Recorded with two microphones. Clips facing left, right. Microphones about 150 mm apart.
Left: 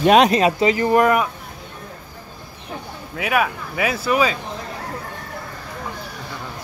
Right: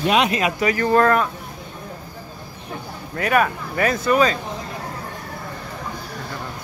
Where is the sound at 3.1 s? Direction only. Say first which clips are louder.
Right 2 dB; 5° left (ahead or behind).